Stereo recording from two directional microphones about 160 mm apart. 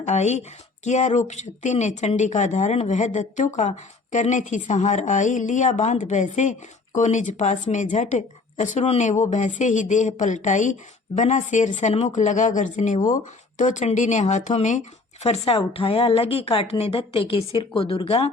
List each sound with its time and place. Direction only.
0.0 s speech: 45° left (ahead or behind)